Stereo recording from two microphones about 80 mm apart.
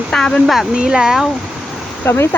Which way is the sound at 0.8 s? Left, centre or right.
Centre.